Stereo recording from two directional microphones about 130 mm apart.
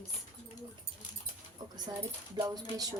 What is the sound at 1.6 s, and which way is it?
A woman's voice, 30° right (ahead or behind).